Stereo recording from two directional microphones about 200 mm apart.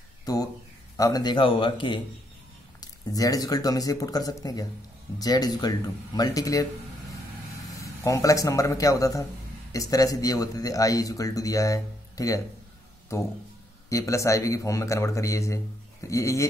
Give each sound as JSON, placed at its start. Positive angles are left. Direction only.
{"t": 0.2, "sound": "a sound", "side_deg": 15}
{"t": 0.9, "sound": "speech", "side_deg": 20}
{"t": 7.8, "sound": "speech", "side_deg": 15}
{"t": 13.8, "sound": "speech", "side_deg": 15}